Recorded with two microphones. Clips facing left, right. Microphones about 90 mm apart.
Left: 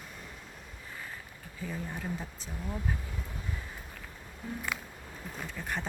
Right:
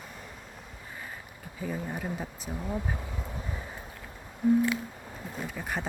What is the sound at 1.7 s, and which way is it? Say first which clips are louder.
Speech: right 3 dB; 15° right (ahead or behind).